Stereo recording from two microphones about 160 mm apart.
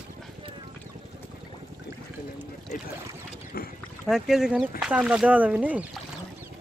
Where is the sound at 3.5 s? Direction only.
70° left (ahead or behind).